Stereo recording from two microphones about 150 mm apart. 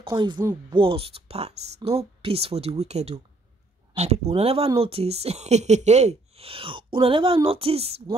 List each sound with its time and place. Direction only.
0.0 s speech: 30° right (ahead or behind)